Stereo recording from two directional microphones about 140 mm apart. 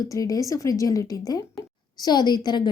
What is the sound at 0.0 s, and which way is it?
A woman's voice, 25° left (ahead or behind).